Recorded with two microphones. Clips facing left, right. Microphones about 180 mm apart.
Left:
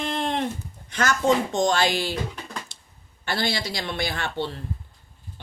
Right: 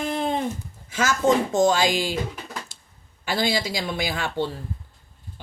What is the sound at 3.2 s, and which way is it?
Speech, 10° right (ahead or behind).